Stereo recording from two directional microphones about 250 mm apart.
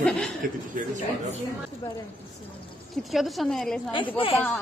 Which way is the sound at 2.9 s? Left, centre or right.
Centre.